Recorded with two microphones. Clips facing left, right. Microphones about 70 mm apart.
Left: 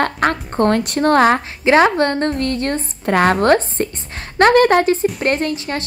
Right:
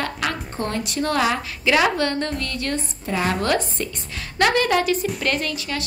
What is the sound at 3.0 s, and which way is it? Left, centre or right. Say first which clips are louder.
A woman's voice: left 9 dB; left.